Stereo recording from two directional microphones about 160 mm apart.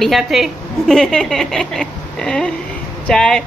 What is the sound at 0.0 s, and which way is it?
A woman's voice, centre (ahead or behind).